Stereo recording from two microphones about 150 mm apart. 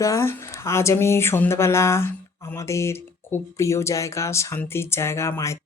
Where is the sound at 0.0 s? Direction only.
20° left (ahead or behind).